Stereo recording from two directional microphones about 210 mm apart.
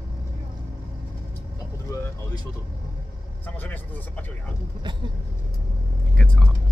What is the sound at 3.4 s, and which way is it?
Speech, 10° left (ahead or behind).